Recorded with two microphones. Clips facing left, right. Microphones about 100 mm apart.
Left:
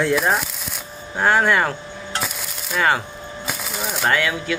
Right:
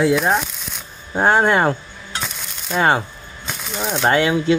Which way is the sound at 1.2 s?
25° right (ahead or behind).